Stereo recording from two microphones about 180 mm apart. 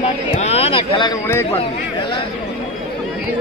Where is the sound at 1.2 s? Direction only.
15° left (ahead or behind).